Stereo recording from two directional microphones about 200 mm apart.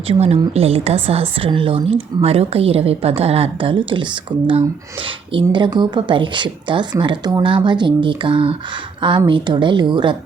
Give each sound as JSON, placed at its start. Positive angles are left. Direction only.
{"t": 0.1, "sound": "a woman's voice", "side_deg": -30}